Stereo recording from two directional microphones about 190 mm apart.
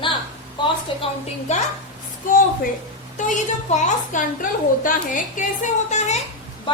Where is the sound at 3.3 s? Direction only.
40° left (ahead or behind).